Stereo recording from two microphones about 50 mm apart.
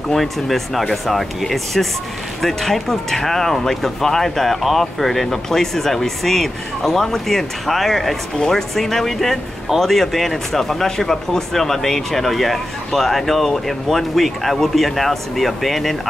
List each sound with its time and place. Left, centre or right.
0.1 s speech: centre